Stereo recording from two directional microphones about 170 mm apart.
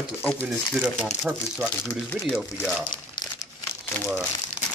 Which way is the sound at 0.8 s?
Centre (ahead or behind).